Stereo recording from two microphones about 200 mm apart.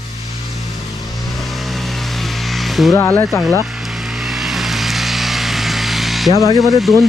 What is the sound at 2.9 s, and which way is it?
Speech, 10° left (ahead or behind).